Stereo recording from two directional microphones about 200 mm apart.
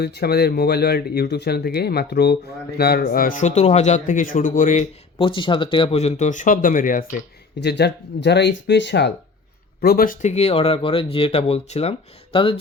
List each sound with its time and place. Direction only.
0.0 s speech: 55° left (ahead or behind)
7.6 s speech: 55° left (ahead or behind)
9.8 s speech: 50° left (ahead or behind); by 12.5 s 25° left (ahead or behind)